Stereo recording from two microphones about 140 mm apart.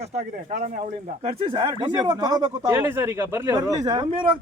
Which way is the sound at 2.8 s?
15° right (ahead or behind).